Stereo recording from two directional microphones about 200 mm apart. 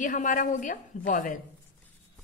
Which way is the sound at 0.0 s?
40° left (ahead or behind).